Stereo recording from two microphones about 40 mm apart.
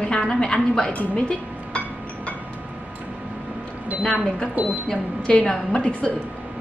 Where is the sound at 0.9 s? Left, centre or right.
Left.